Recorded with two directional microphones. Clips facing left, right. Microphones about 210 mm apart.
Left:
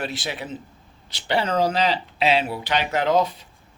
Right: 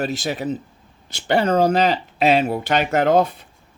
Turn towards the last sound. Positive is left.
turn(degrees=-55)  # may be behind; listen again after turning